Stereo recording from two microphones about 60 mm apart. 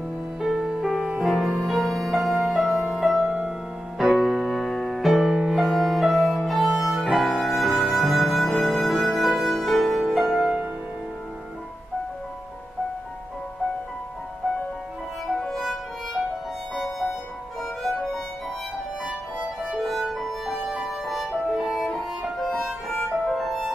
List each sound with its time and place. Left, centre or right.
0.4 s music: centre
3.3 s music: centre
4.0 s music: centre
15.3 s music: centre
19.6 s music: centre
22.8 s music: centre